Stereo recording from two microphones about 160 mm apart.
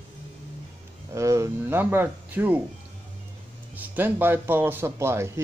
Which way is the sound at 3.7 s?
10° right (ahead or behind).